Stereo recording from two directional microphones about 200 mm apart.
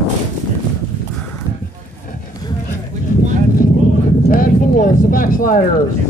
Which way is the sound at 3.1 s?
35° left (ahead or behind).